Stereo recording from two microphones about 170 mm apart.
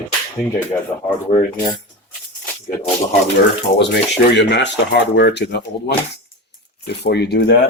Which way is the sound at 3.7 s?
90° left.